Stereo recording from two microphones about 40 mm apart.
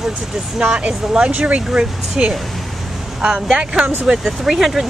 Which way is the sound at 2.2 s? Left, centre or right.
Centre.